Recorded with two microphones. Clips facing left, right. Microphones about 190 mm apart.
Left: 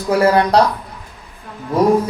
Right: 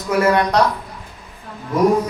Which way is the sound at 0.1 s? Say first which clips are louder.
Left 3 dB; 35° left (ahead or behind).